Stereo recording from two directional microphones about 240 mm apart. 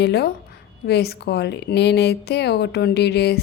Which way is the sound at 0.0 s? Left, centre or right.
Left.